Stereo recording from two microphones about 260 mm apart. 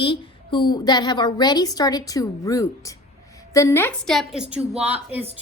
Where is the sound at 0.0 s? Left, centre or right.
Centre.